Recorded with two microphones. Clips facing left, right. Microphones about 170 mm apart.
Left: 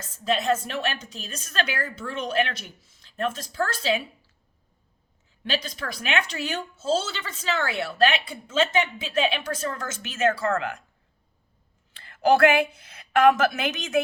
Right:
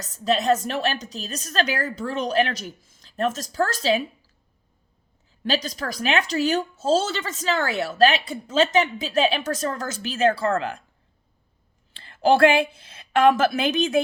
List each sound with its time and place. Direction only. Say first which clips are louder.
0.0 s a woman's voice: right 3 dB; 40° right (ahead or behind)
5.4 s a woman's voice: right 4 dB; 40° right (ahead or behind)
11.9 s a woman's voice: right 2 dB; 30° right (ahead or behind)